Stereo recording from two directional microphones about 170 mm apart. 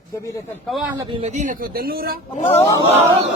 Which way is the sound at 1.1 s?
40° right (ahead or behind).